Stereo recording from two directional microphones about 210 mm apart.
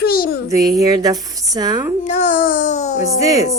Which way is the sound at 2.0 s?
35° left (ahead or behind).